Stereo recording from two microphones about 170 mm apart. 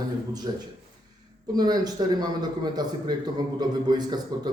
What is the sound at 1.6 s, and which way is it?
A man's voice, 25° right (ahead or behind).